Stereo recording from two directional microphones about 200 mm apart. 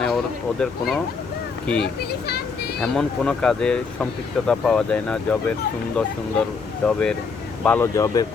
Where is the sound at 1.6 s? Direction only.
5° left (ahead or behind).